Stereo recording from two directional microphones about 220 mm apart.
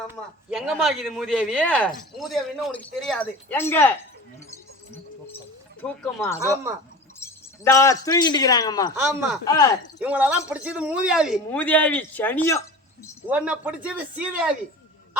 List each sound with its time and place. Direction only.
0.1 s a man's voice: 5° right (ahead or behind)
5.8 s speech: 5° left (ahead or behind)
9.0 s a man's voice: 5° right (ahead or behind)
9.5 s speech: 15° left (ahead or behind)
10.0 s a man's voice: 5° right (ahead or behind); by 12.6 s 10° left (ahead or behind)
13.2 s a man's voice: 5° right (ahead or behind)